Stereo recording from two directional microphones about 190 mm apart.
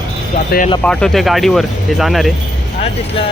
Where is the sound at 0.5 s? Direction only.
55° left (ahead or behind).